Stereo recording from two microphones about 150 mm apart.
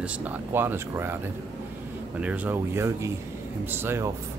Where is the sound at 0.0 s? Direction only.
10° right (ahead or behind).